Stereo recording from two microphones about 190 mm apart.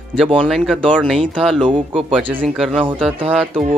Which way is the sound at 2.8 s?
Centre (ahead or behind).